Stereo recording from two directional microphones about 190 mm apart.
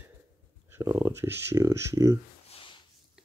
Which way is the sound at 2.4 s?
30° left (ahead or behind).